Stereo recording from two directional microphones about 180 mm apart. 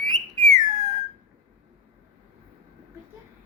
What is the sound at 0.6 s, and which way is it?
Whistle, 20° right (ahead or behind).